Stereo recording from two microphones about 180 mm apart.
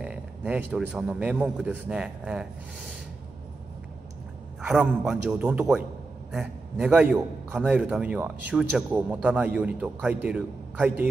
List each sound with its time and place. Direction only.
0.0 s a sound: 10° right (ahead or behind)
0.9 s a man's voice: 5° right (ahead or behind)
4.6 s a man's voice: 5° right (ahead or behind)